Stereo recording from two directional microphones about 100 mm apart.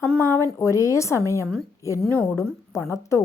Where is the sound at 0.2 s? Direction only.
25° left (ahead or behind).